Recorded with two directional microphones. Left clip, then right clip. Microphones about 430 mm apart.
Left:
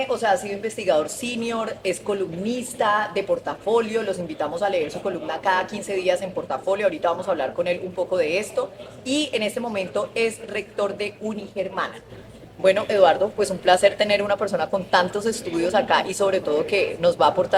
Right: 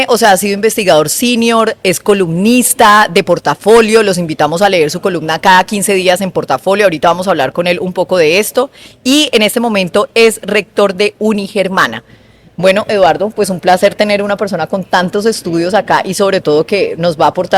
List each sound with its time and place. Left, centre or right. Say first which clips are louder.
0.0 s speech: right 13 dB; right
12.6 s speech: right 8 dB; right